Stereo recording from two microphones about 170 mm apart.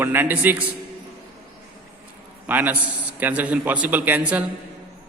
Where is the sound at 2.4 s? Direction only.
10° right (ahead or behind).